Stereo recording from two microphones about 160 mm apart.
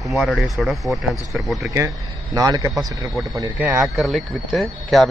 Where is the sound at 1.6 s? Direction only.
20° right (ahead or behind).